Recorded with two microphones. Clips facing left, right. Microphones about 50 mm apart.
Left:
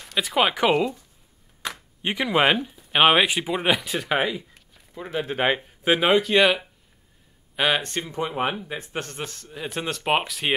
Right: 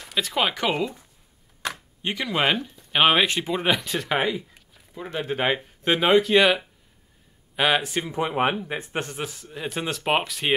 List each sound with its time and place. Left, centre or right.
0.0 s a sound: centre
0.3 s speech: centre
2.0 s a man's voice: centre; by 9.1 s right
9.1 s speech: centre